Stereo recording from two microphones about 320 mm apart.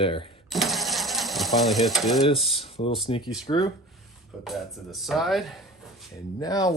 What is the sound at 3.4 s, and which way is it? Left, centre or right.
Speech, centre.